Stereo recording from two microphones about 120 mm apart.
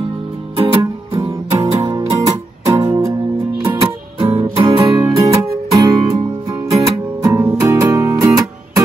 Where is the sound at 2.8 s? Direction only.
25° right (ahead or behind).